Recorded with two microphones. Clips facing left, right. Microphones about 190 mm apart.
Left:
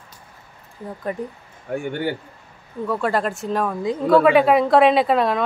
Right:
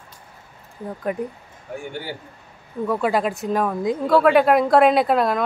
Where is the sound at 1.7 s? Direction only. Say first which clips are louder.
Left 6 dB; 60° left (ahead or behind).